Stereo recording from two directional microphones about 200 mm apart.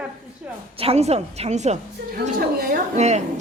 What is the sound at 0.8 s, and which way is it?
Speech, 30° right (ahead or behind).